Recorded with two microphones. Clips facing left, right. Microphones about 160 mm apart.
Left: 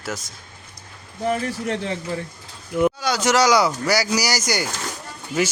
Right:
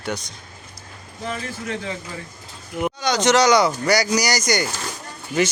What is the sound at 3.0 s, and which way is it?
Speech, 5° left (ahead or behind).